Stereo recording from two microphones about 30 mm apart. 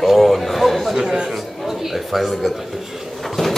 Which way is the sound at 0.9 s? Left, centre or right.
Right.